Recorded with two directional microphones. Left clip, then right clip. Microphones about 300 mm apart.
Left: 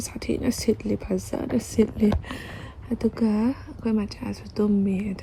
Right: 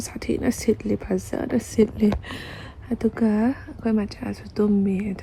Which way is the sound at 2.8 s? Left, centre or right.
Centre.